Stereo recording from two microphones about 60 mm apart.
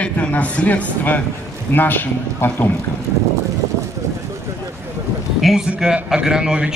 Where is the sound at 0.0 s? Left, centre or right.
Left.